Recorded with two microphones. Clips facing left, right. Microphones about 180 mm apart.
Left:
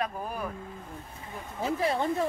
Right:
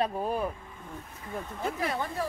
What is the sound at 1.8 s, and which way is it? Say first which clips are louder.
Speech: left 6 dB; 25° left (ahead or behind).